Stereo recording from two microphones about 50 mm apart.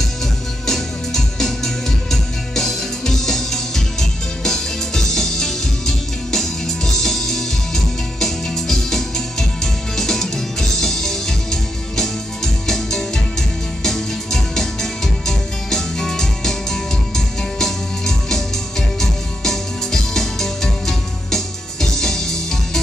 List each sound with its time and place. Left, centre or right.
0.7 s music: centre
12.6 s music: centre